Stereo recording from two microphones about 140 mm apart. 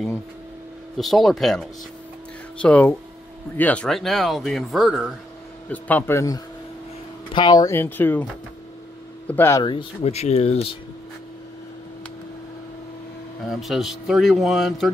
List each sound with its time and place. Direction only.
0.9 s a man's voice: centre (ahead or behind)
5.7 s a man's voice: 10° left (ahead or behind); by 7.7 s 30° left (ahead or behind)
7.7 s a man's voice: 15° left (ahead or behind)
9.3 s a man's voice: 15° left (ahead or behind)
9.6 s speech: 35° left (ahead or behind)
10.0 s speech: 50° left (ahead or behind)
13.5 s a man's voice: centre (ahead or behind)